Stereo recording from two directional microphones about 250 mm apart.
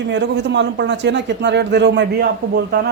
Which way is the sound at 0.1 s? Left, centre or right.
Right.